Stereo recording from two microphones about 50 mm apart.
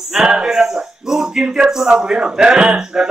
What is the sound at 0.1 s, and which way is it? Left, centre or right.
Speech, centre.